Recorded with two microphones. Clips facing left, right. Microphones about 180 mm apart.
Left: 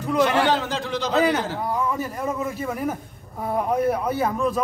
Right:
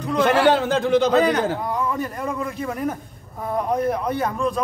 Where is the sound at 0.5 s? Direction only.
55° right (ahead or behind).